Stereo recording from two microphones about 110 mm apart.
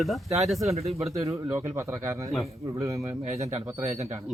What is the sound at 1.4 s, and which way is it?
Speech, 25° right (ahead or behind).